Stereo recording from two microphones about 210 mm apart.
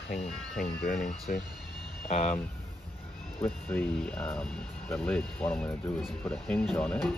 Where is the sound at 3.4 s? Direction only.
5° left (ahead or behind).